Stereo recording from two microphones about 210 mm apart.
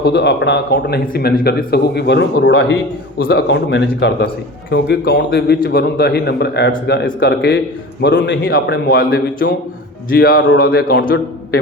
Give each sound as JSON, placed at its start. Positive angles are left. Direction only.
{"t": 0.0, "sound": "speech", "side_deg": 55}
{"t": 3.2, "sound": "a man's voice", "side_deg": 50}
{"t": 8.9, "sound": "speech", "side_deg": 45}